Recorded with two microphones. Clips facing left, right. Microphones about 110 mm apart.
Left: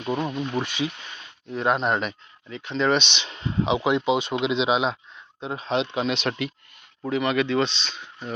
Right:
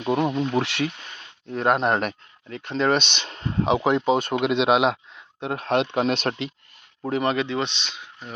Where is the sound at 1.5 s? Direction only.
50° right (ahead or behind).